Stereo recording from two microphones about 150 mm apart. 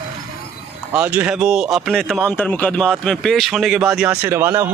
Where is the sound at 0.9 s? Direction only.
10° right (ahead or behind).